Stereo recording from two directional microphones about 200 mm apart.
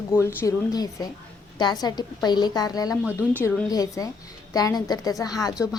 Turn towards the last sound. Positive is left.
turn(degrees=20)  # may be behind; listen again after turning